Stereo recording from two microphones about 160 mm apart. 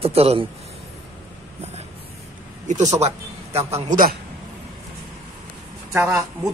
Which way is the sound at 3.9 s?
60° right (ahead or behind).